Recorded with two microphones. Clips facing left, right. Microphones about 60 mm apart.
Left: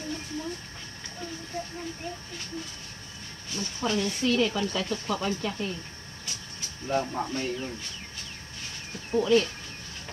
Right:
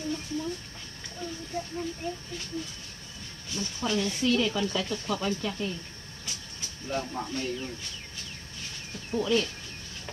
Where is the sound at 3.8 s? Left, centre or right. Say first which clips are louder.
Left 1 dB; centre.